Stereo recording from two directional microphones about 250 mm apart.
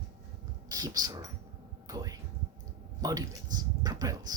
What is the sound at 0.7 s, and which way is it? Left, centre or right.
Speech, centre.